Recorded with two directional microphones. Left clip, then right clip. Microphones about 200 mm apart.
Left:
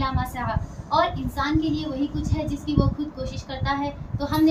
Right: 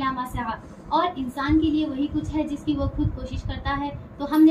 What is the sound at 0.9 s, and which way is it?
Child singing, 15° left (ahead or behind).